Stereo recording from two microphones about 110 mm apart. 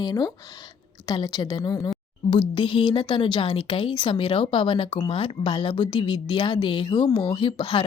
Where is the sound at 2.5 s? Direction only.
50° left (ahead or behind).